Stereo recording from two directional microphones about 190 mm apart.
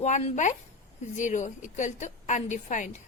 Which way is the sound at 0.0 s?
35° left (ahead or behind).